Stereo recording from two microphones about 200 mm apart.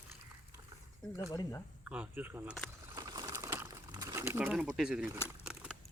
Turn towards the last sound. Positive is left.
turn(degrees=-5)  # may be behind; listen again after turning